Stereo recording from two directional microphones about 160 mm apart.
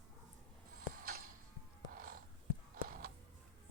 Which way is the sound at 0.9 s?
65° right (ahead or behind).